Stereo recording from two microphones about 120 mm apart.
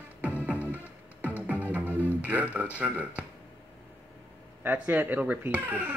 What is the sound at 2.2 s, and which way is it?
Speech, 15° right (ahead or behind).